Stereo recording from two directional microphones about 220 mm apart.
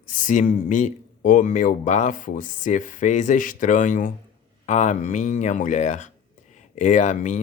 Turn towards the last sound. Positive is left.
turn(degrees=35)  # may be behind; listen again after turning